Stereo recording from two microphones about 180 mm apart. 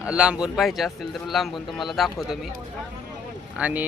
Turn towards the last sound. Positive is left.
turn(degrees=-10)  # may be behind; listen again after turning